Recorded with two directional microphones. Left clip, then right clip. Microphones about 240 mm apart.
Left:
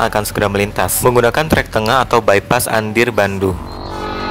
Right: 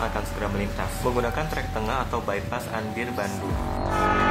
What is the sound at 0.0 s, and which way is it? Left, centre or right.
A man's voice, left.